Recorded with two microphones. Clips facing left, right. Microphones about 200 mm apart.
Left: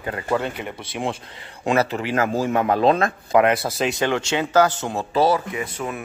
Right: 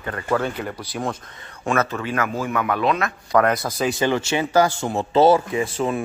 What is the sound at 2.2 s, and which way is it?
Speech, 35° left (ahead or behind).